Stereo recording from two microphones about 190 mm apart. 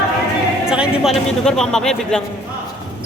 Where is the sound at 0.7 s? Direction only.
Centre (ahead or behind).